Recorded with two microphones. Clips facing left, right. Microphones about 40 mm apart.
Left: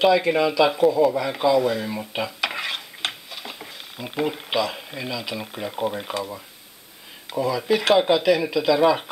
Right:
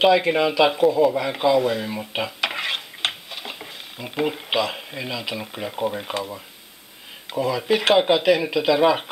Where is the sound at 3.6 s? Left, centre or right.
Centre.